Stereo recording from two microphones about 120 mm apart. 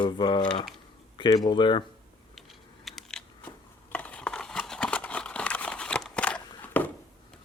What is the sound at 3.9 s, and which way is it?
Crumpling, 10° left (ahead or behind).